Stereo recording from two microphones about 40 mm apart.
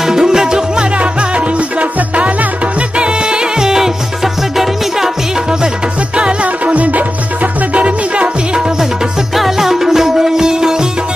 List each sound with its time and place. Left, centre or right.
0.0 s music: centre
0.9 s music: right; by 5.1 s centre
6.1 s music: right
9.3 s music: centre